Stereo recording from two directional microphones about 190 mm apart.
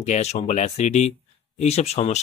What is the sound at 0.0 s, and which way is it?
Speech, 35° left (ahead or behind).